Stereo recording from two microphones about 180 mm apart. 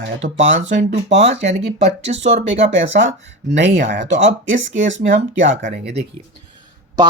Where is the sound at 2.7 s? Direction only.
85° right.